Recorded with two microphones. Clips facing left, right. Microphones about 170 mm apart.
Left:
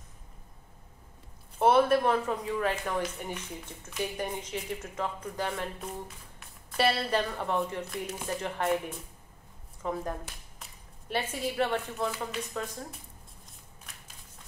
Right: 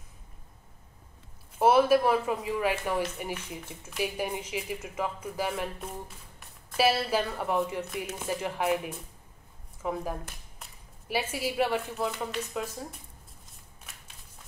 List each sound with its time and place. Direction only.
1.6 s speech: 5° right (ahead or behind)